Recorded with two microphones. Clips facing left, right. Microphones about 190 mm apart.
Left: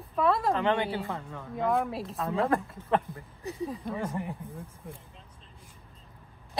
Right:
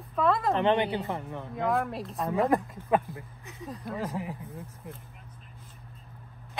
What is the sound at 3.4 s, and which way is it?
Speech, 30° left (ahead or behind).